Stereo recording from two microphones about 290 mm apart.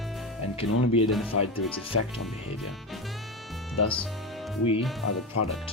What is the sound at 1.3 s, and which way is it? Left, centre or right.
Speech, left.